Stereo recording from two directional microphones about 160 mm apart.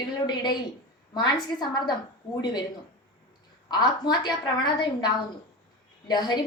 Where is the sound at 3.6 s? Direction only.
25° left (ahead or behind).